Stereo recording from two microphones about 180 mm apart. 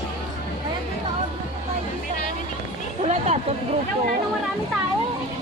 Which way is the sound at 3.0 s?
35° right (ahead or behind).